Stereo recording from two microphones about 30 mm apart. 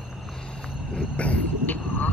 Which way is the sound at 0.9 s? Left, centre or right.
Left.